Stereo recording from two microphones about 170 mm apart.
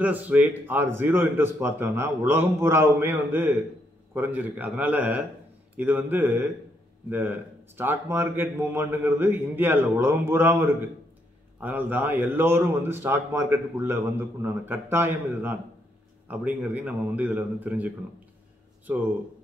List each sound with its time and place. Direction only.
0.0 s a man's voice: 10° right (ahead or behind)